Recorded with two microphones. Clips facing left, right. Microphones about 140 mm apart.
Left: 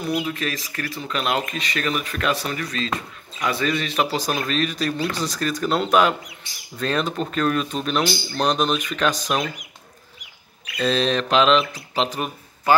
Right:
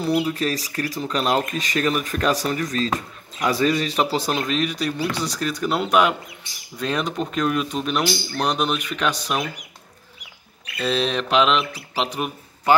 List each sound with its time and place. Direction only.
0.0 s speech: 35° right (ahead or behind); by 9.2 s 10° right (ahead or behind)
10.8 s speech: 10° right (ahead or behind)